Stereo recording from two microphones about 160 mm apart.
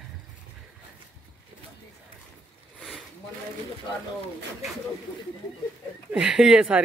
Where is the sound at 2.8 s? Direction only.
Centre (ahead or behind).